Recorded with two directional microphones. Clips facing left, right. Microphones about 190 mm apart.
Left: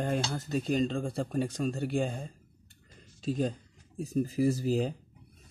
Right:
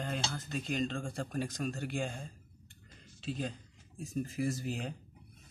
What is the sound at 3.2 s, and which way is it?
Speech, 40° left (ahead or behind).